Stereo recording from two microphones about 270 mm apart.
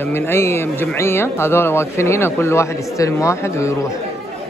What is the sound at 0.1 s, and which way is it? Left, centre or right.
Speech, centre.